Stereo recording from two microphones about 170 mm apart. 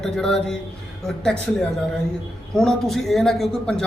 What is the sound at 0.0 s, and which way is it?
A man's voice, 5° left (ahead or behind).